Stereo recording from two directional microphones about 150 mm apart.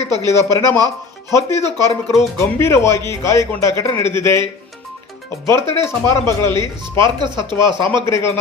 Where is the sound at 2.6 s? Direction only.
20° left (ahead or behind).